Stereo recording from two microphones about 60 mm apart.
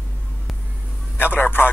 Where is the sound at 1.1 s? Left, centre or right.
Left.